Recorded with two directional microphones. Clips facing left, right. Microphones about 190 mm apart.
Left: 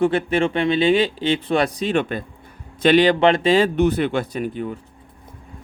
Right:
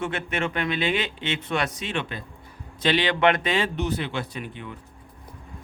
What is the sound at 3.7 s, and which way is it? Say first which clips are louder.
Speech: left 9 dB; 55° left (ahead or behind).